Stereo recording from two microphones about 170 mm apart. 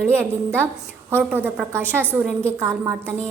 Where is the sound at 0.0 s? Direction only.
15° right (ahead or behind).